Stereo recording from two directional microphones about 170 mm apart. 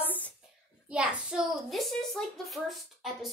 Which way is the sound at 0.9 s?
5° right (ahead or behind).